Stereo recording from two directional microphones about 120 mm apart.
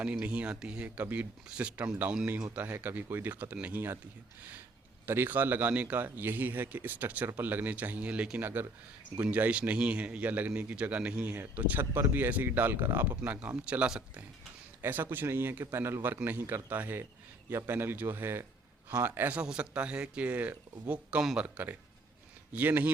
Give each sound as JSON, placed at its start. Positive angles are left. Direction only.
{"t": 0.0, "sound": "speech", "side_deg": -10}
{"t": 5.0, "sound": "speech", "side_deg": -20}